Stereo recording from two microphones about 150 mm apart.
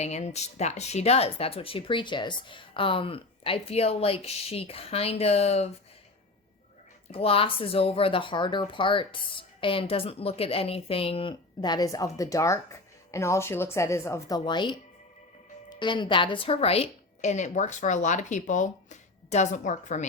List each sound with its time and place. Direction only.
0.0 s speech: 50° left (ahead or behind)
7.1 s a woman's voice: 40° left (ahead or behind)